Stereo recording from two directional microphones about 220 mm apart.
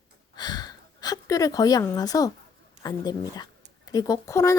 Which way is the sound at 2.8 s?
15° left (ahead or behind).